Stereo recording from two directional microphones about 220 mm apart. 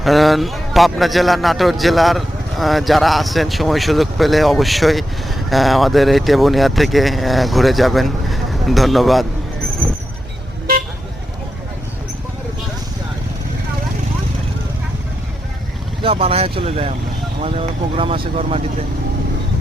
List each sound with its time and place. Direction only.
0.0 s a man's voice: centre (ahead or behind)
16.0 s speech: 25° right (ahead or behind)